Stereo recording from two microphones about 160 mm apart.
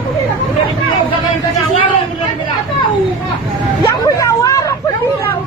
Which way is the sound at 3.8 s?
20° left (ahead or behind).